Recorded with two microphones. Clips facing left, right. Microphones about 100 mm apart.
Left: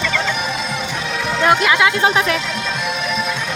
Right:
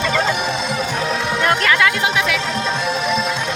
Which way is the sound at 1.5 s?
15° left (ahead or behind).